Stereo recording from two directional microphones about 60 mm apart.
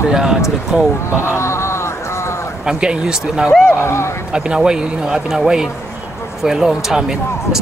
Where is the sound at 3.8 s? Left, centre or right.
Left.